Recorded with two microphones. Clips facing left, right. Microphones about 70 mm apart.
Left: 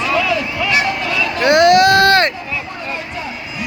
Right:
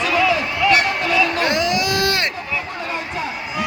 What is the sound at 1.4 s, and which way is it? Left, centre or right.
Baby cry, left.